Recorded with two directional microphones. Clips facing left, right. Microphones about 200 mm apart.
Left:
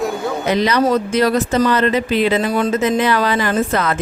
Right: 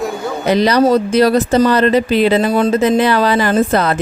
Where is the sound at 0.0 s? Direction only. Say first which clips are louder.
Right 1 dB; centre (ahead or behind).